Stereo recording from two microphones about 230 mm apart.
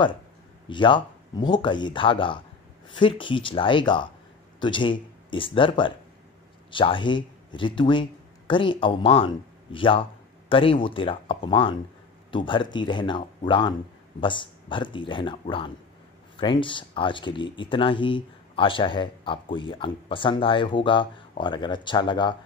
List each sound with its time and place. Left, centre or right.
0.7 s speech: left